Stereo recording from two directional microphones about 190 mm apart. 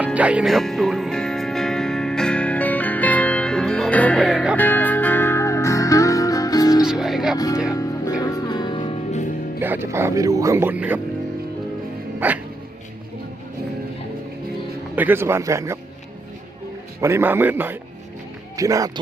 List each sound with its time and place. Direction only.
0.0 s music: 5° right (ahead or behind); by 6.8 s 20° left (ahead or behind)
6.8 s music: centre (ahead or behind)
7.3 s music: 20° left (ahead or behind)
9.6 s speech: 10° right (ahead or behind)
12.2 s dog: 10° right (ahead or behind)
14.9 s speech: 10° right (ahead or behind)
17.0 s speech: 15° right (ahead or behind)